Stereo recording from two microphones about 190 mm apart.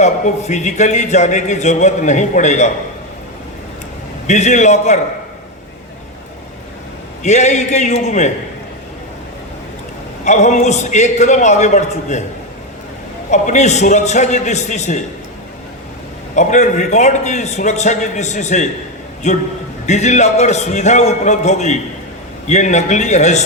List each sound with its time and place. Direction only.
0.0 s a man's voice: 40° left (ahead or behind)
4.3 s a man's voice: 40° left (ahead or behind)
7.2 s a man's voice: 40° left (ahead or behind)
10.2 s a man's voice: 40° left (ahead or behind)
13.3 s a man's voice: 40° left (ahead or behind)
16.3 s a man's voice: 40° left (ahead or behind)